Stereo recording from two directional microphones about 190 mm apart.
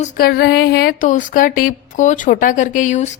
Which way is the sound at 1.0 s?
40° left (ahead or behind).